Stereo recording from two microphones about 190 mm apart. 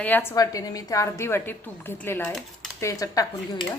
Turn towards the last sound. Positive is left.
turn(degrees=20)  # may be behind; listen again after turning